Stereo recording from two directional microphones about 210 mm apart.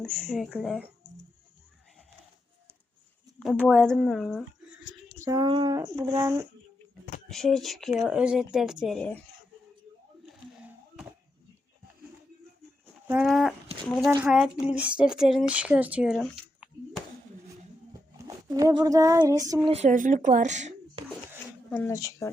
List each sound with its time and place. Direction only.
0.0 s speech: 5° left (ahead or behind)
3.4 s speech: centre (ahead or behind)
5.2 s speech: 20° right (ahead or behind)
7.3 s speech: centre (ahead or behind)
13.1 s speech: 5° right (ahead or behind)
18.3 s speech: 15° right (ahead or behind)
19.7 s speech: 35° right (ahead or behind)
21.7 s speech: 10° left (ahead or behind)